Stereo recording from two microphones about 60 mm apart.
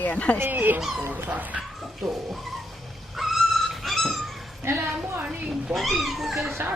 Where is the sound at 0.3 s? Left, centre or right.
Right.